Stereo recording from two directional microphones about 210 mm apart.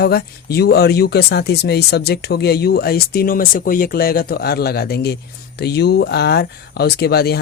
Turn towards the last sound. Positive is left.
turn(degrees=50)  # may be behind; listen again after turning